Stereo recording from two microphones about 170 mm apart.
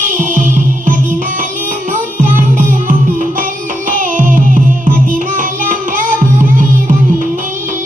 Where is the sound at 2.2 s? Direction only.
50° right (ahead or behind).